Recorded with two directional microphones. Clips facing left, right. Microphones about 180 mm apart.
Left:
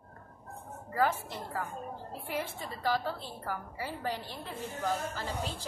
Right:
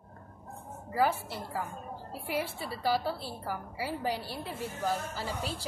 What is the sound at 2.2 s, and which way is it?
A woman's voice, 10° right (ahead or behind).